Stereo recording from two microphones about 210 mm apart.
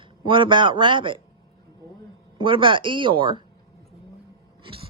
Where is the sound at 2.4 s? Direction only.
25° right (ahead or behind).